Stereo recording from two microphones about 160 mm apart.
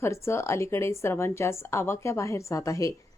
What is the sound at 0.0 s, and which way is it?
A woman's voice, 15° left (ahead or behind).